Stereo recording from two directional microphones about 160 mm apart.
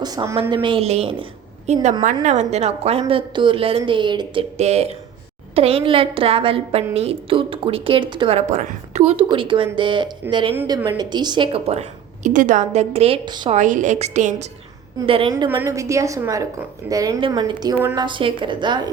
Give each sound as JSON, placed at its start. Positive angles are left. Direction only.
{"t": 0.0, "sound": "a woman's voice", "side_deg": -25}
{"t": 4.5, "sound": "a woman's voice", "side_deg": -40}
{"t": 13.2, "sound": "a woman's voice", "side_deg": -25}
{"t": 13.5, "sound": "a woman's voice", "side_deg": -50}
{"t": 15.0, "sound": "speech", "side_deg": -35}
{"t": 15.4, "sound": "a woman's voice", "side_deg": -15}